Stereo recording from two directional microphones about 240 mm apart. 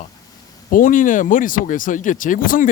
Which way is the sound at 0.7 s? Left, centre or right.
Left.